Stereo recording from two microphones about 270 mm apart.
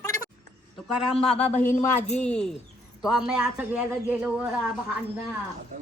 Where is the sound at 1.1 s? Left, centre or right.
Left.